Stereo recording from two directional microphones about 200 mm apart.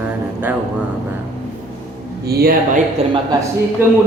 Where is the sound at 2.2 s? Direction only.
50° right (ahead or behind).